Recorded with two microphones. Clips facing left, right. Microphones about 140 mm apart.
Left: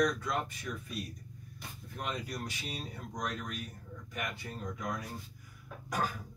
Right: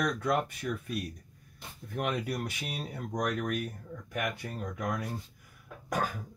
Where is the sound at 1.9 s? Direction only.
60° right (ahead or behind).